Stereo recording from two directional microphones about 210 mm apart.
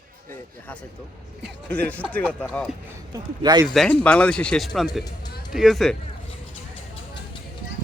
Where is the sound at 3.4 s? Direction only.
20° right (ahead or behind).